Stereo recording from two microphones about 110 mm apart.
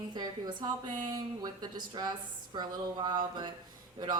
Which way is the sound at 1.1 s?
40° right (ahead or behind).